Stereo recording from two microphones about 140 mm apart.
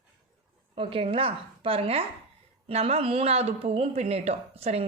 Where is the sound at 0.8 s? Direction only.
40° right (ahead or behind).